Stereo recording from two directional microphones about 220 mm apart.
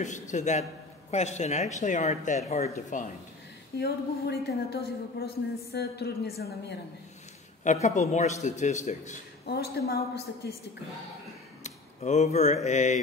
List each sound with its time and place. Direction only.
0.0 s speech: 35° left (ahead or behind)
3.7 s a woman's voice: 45° left (ahead or behind)
7.6 s speech: 30° left (ahead or behind)
9.5 s a woman's voice: 45° left (ahead or behind)
11.6 s a sound: 30° left (ahead or behind)
12.6 s speech: 30° left (ahead or behind)